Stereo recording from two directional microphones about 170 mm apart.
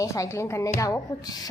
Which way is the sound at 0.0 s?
20° left (ahead or behind).